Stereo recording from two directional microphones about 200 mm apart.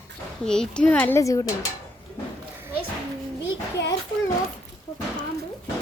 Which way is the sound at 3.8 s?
60° left (ahead or behind).